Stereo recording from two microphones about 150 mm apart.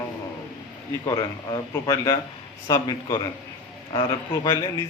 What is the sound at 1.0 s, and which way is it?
A man's voice, 25° left (ahead or behind).